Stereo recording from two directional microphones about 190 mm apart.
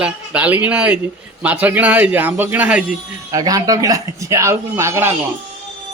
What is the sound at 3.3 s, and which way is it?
A man's voice, 20° right (ahead or behind).